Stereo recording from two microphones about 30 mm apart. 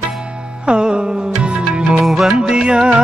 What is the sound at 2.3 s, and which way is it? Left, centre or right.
Music, right.